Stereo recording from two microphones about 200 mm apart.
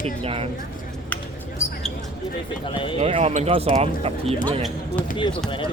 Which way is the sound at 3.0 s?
35° right (ahead or behind).